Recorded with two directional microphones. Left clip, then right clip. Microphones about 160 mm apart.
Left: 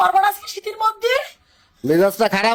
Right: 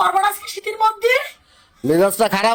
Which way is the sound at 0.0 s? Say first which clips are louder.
Left 1 dB; 15° left (ahead or behind).